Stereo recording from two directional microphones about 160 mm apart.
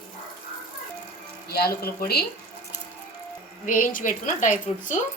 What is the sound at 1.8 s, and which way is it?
Speech, 75° left (ahead or behind).